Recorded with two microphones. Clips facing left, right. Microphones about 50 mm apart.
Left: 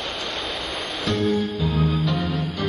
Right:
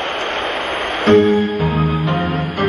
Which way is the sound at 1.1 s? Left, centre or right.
Right.